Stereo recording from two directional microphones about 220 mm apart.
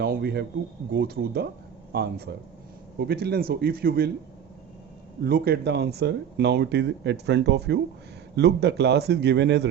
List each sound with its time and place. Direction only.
0.0 s a man's voice: 45° right (ahead or behind)
5.2 s speech: 45° right (ahead or behind)